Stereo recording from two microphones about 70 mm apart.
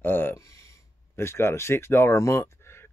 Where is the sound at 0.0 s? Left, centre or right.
Left.